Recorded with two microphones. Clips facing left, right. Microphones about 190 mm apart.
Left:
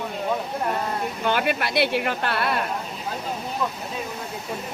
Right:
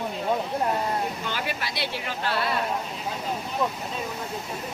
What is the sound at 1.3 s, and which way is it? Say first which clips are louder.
Speech: left 8 dB; 60° left (ahead or behind).